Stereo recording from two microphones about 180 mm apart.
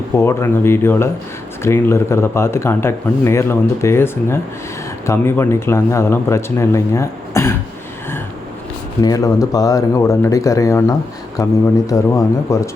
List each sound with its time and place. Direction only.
0.2 s speech: 15° left (ahead or behind)
9.0 s speech: 20° left (ahead or behind)